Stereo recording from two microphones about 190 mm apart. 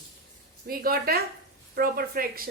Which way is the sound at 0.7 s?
50° right (ahead or behind).